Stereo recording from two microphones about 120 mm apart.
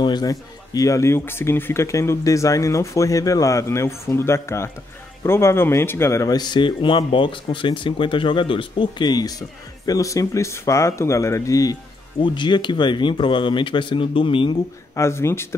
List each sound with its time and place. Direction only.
0.0 s a man's voice: 35° left (ahead or behind)
15.0 s a man's voice: 20° left (ahead or behind)